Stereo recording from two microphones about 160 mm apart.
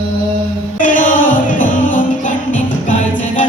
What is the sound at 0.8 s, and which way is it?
Music, 55° left (ahead or behind).